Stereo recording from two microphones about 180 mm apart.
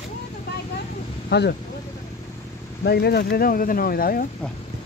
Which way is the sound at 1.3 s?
75° left (ahead or behind).